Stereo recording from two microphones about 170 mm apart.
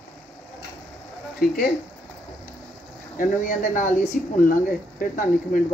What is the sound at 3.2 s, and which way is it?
Speech, 50° left (ahead or behind).